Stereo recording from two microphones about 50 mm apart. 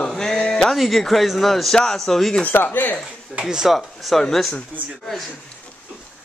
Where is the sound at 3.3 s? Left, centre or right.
Centre.